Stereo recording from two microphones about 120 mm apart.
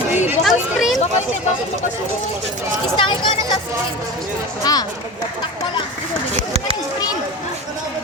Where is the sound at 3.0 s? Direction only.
45° left (ahead or behind).